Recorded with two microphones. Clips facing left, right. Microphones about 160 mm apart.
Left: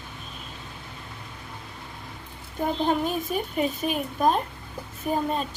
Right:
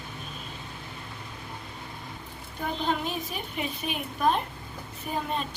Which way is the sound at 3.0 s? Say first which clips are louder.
Left 6 dB; 45° left (ahead or behind).